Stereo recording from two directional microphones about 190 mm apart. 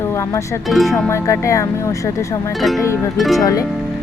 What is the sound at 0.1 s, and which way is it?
Music, 15° left (ahead or behind).